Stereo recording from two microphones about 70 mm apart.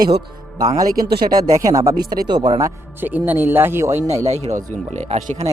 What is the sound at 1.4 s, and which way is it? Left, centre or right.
Speech, right.